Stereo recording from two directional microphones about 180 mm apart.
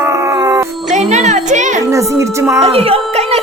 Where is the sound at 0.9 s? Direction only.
40° right (ahead or behind).